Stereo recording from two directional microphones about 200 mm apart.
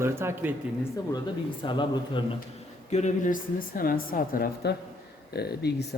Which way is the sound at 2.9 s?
35° left (ahead or behind).